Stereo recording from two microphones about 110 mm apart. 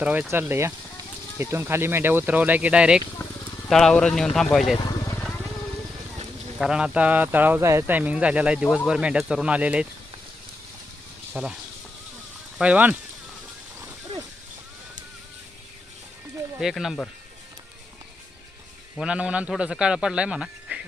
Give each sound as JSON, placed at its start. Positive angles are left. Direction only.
{"t": 0.0, "sound": "speech", "side_deg": -10}
{"t": 3.2, "sound": "a sound", "side_deg": 15}
{"t": 3.7, "sound": "speech", "side_deg": 5}
{"t": 4.8, "sound": "vehicle", "side_deg": 40}
{"t": 6.6, "sound": "speech", "side_deg": -5}
{"t": 11.3, "sound": "speech", "side_deg": -15}
{"t": 12.5, "sound": "speech", "side_deg": -15}
{"t": 16.6, "sound": "speech", "side_deg": -5}
{"t": 18.9, "sound": "speech", "side_deg": -10}